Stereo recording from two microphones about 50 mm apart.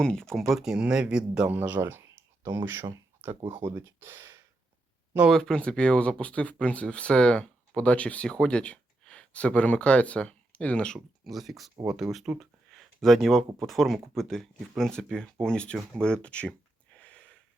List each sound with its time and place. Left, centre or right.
0.0 s speech: centre
0.3 s speech: centre
0.7 s speech: centre
1.5 s speech: right
1.8 s speech: right
3.2 s speech: right
3.6 s speech: right
5.4 s speech: centre
11.2 s speech: centre
12.4 s a sound: centre
13.6 s speech: centre; by 17.3 s left